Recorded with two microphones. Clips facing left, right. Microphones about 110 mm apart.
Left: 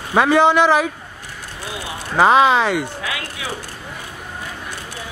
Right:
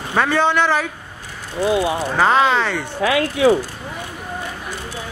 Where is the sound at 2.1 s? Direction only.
15° left (ahead or behind).